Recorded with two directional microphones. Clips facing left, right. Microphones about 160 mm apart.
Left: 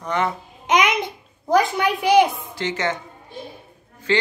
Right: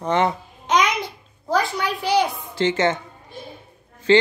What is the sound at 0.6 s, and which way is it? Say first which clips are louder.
A child's voice: left 1 dB; 20° left (ahead or behind).